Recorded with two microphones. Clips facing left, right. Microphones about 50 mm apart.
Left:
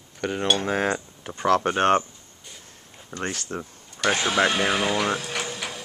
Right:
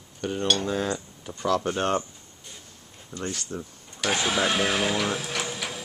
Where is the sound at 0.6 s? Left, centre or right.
Left.